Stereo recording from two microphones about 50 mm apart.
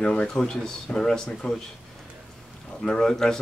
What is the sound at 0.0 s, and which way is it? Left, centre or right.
Speech, left.